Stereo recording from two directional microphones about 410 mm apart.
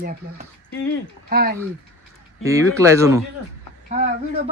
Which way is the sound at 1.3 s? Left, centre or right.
Right.